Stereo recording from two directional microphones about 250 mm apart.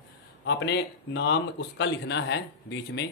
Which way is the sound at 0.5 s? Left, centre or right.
Left.